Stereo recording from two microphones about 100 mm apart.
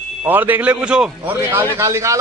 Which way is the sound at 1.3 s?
20° right (ahead or behind).